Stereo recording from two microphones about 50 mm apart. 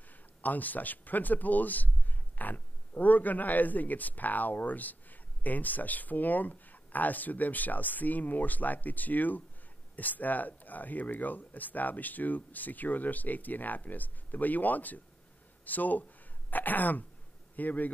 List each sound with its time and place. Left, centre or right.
0.1 s a man's voice: left